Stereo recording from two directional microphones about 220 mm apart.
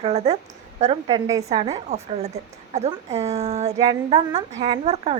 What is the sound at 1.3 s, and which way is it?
Speech, 15° right (ahead or behind).